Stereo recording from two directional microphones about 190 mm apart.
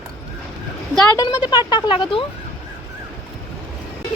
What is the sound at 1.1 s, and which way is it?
Speech, 20° left (ahead or behind).